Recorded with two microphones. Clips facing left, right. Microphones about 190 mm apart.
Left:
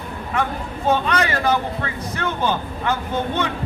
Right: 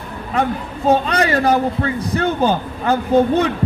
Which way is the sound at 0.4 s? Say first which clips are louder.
Right 5 dB; 35° right (ahead or behind).